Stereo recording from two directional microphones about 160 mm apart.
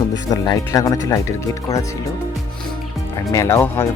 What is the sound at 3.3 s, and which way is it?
Speech, 20° left (ahead or behind).